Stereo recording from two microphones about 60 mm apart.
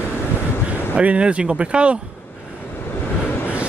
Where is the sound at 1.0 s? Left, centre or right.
Centre.